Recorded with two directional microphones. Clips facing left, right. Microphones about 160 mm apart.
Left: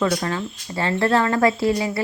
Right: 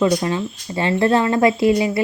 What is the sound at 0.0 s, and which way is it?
Speech, 15° right (ahead or behind).